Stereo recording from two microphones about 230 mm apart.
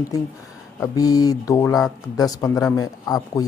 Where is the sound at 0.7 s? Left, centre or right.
Centre.